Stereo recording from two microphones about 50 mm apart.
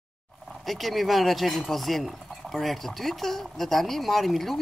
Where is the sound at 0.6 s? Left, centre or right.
Centre.